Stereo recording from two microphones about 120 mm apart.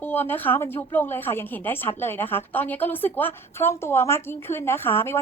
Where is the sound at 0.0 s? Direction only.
15° left (ahead or behind).